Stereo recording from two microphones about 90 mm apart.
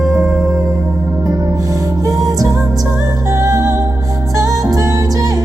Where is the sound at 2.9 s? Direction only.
30° right (ahead or behind).